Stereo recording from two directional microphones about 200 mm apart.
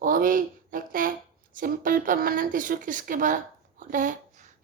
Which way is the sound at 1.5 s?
45° right (ahead or behind).